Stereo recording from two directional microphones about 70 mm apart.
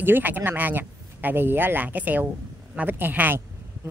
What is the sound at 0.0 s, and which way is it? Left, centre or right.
Speech, right.